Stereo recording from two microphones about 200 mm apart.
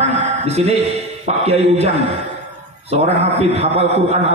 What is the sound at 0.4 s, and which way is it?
A man's voice, 30° right (ahead or behind).